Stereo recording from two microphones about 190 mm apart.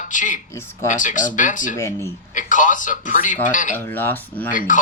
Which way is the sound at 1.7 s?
15° left (ahead or behind).